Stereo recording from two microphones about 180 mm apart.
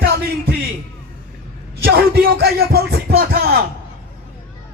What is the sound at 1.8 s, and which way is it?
Music, 55° right (ahead or behind).